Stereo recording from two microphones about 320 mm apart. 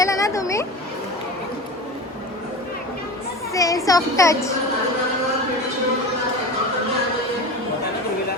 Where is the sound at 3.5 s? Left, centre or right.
Centre.